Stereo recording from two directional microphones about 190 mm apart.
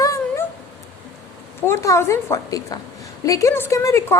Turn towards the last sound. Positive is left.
turn(degrees=15)  # may be behind; listen again after turning